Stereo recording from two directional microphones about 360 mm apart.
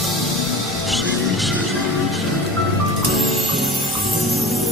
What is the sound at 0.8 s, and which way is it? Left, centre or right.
Music, centre.